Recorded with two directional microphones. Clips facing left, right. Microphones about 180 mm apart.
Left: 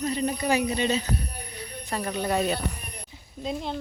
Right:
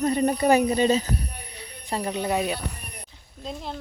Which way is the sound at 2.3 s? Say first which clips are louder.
Left 1 dB; 10° right (ahead or behind).